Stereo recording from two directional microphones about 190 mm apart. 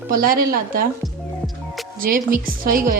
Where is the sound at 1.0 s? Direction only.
Centre (ahead or behind).